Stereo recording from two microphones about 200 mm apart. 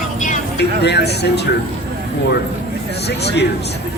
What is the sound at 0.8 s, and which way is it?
Speech, 55° left (ahead or behind).